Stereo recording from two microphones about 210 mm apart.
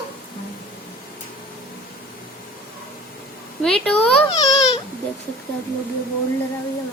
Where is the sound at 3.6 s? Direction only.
5° left (ahead or behind).